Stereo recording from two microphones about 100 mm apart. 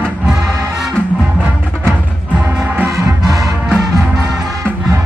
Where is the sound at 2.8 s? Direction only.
30° right (ahead or behind).